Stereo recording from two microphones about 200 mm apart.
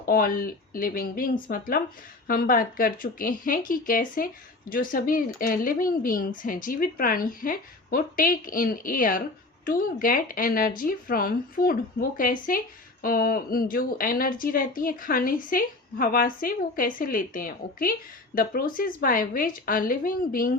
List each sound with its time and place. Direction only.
0.0 s speech: 45° left (ahead or behind)